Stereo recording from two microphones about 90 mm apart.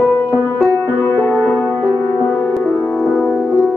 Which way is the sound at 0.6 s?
20° left (ahead or behind).